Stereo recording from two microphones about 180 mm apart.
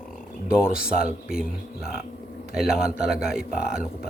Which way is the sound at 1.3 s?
55° left (ahead or behind).